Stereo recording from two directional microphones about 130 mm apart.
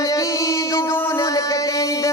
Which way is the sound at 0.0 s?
25° left (ahead or behind).